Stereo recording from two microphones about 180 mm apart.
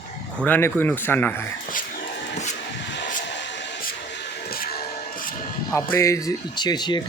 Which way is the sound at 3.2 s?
80° left.